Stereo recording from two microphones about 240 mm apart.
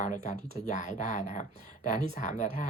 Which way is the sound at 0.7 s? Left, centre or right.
Left.